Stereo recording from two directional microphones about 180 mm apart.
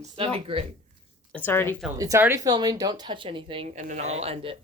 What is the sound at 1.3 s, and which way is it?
Speech, 10° left (ahead or behind).